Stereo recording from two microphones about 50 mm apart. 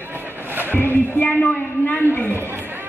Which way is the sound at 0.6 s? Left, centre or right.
Left.